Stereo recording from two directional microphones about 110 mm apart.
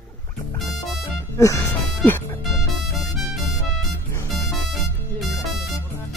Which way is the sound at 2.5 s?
Centre (ahead or behind).